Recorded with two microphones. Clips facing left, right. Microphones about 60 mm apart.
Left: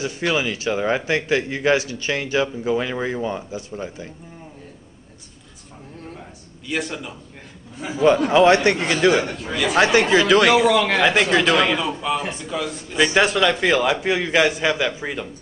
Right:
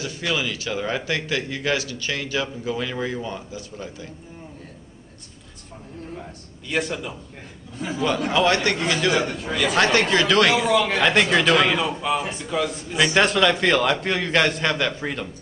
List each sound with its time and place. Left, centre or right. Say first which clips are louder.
0.0 s speech: left 4 dB; left
6.7 s a man's voice: right 1 dB; centre
8.0 s speech: left 7 dB; left
9.5 s a man's voice: left 1 dB; centre
9.8 s a man's voice: left 4 dB; centre